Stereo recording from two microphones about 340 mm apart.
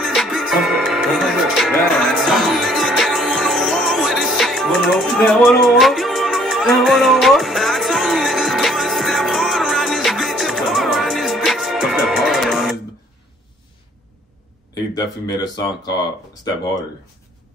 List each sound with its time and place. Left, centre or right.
0.0 s music: centre
14.7 s speech: centre